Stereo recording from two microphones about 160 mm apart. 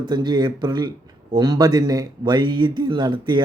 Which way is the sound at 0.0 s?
25° right (ahead or behind).